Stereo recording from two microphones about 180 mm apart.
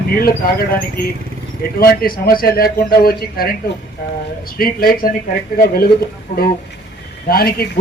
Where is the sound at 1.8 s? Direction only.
55° left (ahead or behind).